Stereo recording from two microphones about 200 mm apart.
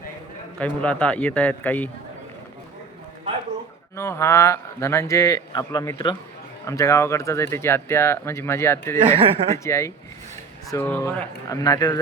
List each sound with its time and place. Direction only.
0.6 s speech: 5° left (ahead or behind)
3.9 s speech: 15° left (ahead or behind)
9.0 s speech: 25° right (ahead or behind)
9.6 s speech: 15° left (ahead or behind)